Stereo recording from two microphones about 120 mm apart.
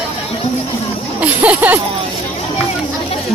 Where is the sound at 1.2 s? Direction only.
15° right (ahead or behind).